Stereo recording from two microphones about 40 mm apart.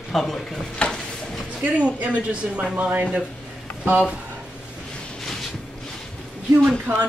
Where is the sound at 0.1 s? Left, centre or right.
Centre.